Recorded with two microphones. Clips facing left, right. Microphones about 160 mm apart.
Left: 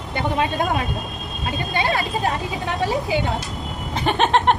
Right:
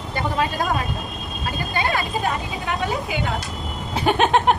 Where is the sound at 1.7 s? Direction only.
25° left (ahead or behind).